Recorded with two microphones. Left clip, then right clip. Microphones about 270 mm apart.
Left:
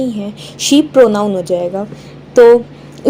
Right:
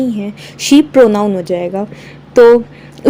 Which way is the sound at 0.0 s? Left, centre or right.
Right.